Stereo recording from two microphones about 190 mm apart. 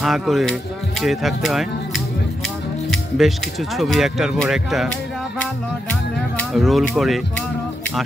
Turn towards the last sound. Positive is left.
turn(degrees=0)  # may be behind; listen again after turning